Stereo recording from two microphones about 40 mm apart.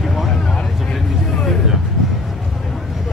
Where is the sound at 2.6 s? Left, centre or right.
Centre.